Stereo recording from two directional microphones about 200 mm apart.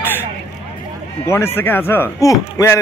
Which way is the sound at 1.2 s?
15° left (ahead or behind).